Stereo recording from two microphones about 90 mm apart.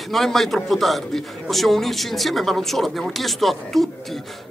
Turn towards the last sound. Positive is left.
turn(degrees=0)  # may be behind; listen again after turning